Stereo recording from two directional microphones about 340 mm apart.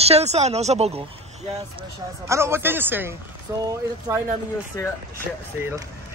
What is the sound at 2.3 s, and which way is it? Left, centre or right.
Speech, centre.